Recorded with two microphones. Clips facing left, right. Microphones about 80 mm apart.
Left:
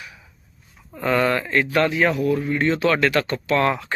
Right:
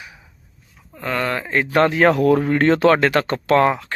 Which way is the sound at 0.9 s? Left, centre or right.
Centre.